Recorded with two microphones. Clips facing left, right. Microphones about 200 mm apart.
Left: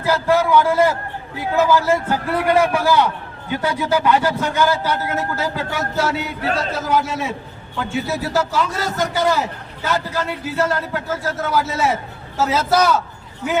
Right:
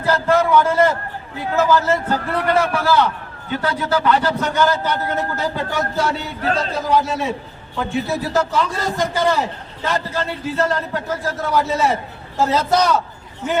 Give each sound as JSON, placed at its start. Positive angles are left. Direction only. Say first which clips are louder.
{"t": 0.0, "sound": "a man's voice", "louder": "even", "side_deg": 10}